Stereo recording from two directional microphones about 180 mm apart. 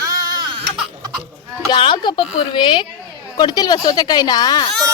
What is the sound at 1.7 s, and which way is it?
Speech, 25° left (ahead or behind).